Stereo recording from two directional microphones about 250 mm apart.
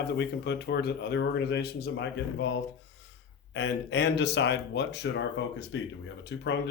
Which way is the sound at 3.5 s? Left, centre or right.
Left.